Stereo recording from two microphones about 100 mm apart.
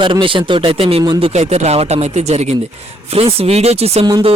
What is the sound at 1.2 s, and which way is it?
Speech, 90° right.